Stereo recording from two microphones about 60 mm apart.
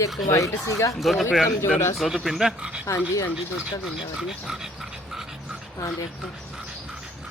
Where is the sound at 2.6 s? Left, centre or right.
Centre.